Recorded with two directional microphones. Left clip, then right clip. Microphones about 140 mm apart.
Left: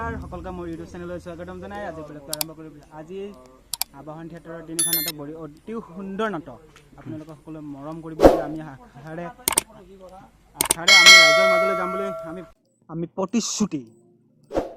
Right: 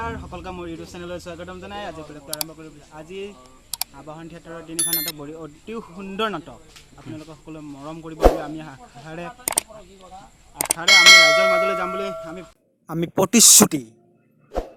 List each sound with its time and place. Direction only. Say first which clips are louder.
0.0 s speech: right 1 dB; centre (ahead or behind)
4.8 s speech: even; centre (ahead or behind)
10.6 s speech: even; centre (ahead or behind)
13.0 s speech: right 9 dB; 75° right (ahead or behind)